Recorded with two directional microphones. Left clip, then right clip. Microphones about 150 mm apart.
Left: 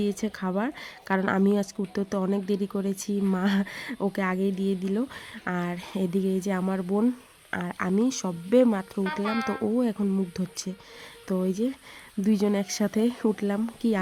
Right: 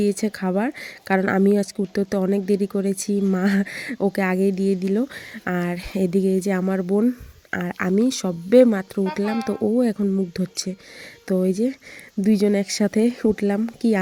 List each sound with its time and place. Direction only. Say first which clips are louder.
0.0 s speech: right 7 dB; 25° right (ahead or behind)